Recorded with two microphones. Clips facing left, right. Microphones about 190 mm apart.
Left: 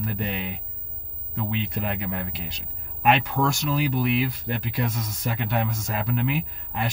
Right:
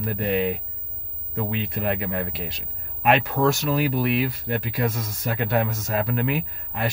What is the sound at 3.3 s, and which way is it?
Speech, 50° right (ahead or behind).